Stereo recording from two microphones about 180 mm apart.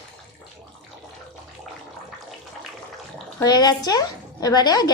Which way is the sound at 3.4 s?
20° left (ahead or behind).